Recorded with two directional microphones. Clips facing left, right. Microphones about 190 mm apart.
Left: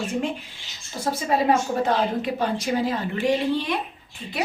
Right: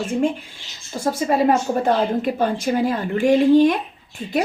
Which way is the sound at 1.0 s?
50° right (ahead or behind).